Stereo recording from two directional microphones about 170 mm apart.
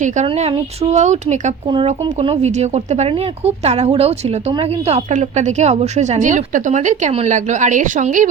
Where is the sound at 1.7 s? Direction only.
30° right (ahead or behind).